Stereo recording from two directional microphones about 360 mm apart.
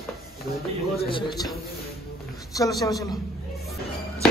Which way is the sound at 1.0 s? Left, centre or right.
Centre.